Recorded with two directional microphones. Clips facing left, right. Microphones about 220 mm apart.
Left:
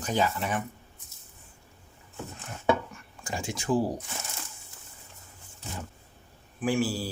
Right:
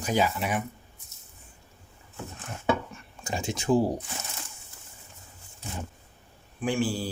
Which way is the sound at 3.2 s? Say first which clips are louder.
Right 3 dB; 20° right (ahead or behind).